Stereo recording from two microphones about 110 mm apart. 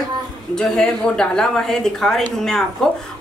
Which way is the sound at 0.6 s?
5° left (ahead or behind).